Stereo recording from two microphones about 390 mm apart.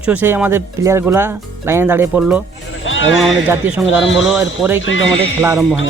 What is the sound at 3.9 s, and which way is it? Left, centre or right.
Speech, left.